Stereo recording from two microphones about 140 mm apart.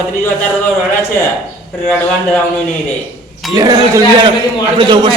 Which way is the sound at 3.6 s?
30° right (ahead or behind).